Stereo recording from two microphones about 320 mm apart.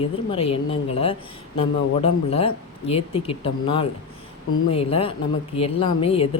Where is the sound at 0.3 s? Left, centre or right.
Centre.